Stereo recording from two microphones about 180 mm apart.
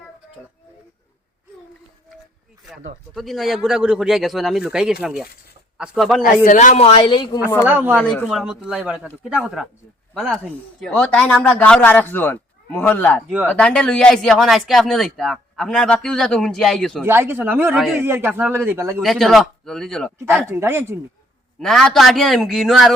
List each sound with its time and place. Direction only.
3.2 s speech: centre (ahead or behind)
6.2 s a man's voice: 45° left (ahead or behind); by 7.3 s 30° left (ahead or behind)
7.6 s a man's voice: 10° right (ahead or behind); by 13.2 s 10° left (ahead or behind)
13.2 s a man's voice: 10° right (ahead or behind)
13.5 s speech: 5° left (ahead or behind)
17.0 s a man's voice: 10° right (ahead or behind)
17.7 s speech: centre (ahead or behind)
18.0 s a man's voice: 10° right (ahead or behind)
19.0 s speech: centre (ahead or behind)
20.5 s a man's voice: 15° right (ahead or behind)
21.6 s speech: centre (ahead or behind)